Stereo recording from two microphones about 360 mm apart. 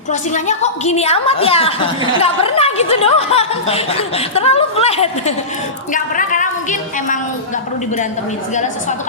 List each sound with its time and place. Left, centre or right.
0.1 s a woman's voice: centre